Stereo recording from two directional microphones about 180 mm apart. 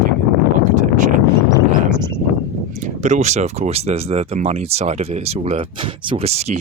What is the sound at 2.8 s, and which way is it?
Speech, 40° right (ahead or behind).